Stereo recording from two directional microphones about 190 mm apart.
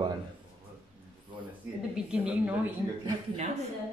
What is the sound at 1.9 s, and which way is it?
Speech, 5° right (ahead or behind).